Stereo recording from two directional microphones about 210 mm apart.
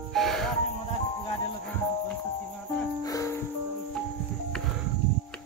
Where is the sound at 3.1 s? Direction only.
15° left (ahead or behind).